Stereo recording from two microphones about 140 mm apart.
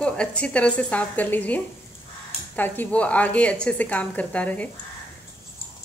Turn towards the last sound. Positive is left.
turn(degrees=10)  # may be behind; listen again after turning